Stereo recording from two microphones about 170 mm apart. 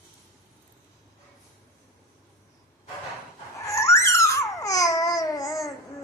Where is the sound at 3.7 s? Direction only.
15° left (ahead or behind).